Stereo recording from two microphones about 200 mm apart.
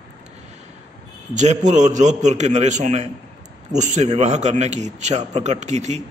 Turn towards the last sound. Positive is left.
turn(degrees=-35)  # may be behind; listen again after turning